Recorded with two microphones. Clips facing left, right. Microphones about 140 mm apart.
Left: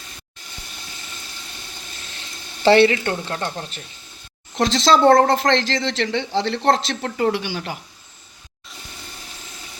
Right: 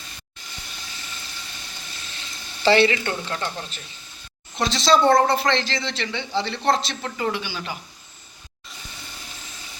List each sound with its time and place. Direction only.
2.6 s speech: 50° left (ahead or behind)
3.0 s speech: 40° left (ahead or behind)
4.5 s a man's voice: 90° left
7.3 s speech: 65° left (ahead or behind)